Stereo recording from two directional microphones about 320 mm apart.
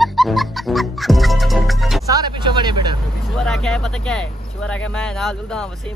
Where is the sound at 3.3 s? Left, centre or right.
Centre.